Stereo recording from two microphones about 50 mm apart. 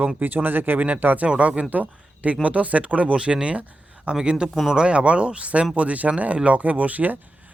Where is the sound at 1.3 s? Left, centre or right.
Right.